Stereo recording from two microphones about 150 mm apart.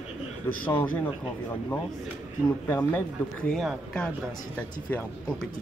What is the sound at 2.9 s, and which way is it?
Speech, 10° left (ahead or behind).